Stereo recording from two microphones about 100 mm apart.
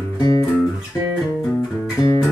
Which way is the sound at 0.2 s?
35° left (ahead or behind).